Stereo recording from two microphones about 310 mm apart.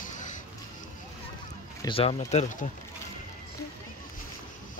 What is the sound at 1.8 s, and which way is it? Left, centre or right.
Speech, centre.